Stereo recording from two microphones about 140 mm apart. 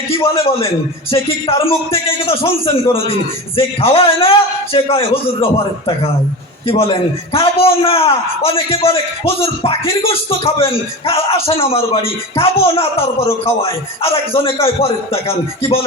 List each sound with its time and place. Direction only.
0.1 s a man's voice: 40° left (ahead or behind)